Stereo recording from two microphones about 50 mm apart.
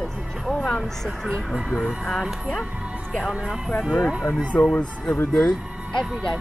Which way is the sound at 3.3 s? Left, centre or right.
Centre.